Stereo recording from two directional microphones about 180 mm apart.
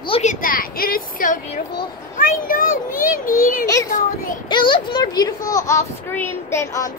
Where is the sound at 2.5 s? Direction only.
50° left (ahead or behind).